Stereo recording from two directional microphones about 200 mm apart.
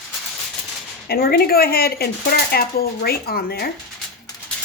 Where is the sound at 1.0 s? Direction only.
50° left (ahead or behind).